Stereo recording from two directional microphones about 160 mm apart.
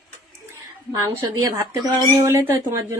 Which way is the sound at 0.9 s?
20° right (ahead or behind).